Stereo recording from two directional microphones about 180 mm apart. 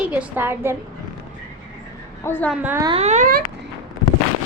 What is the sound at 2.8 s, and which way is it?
Speech, 35° right (ahead or behind).